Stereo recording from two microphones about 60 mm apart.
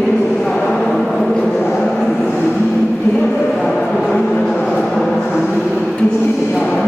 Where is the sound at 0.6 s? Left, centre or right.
Centre.